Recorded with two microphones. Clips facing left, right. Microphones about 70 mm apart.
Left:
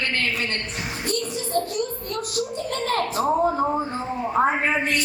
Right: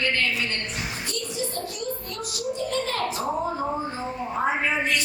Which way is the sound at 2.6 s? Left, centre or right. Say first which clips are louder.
Left 2 dB; left.